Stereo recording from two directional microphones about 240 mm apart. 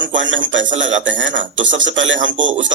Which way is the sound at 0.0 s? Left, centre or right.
Right.